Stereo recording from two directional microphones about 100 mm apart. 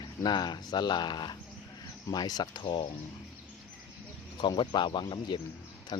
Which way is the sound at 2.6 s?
60° left (ahead or behind).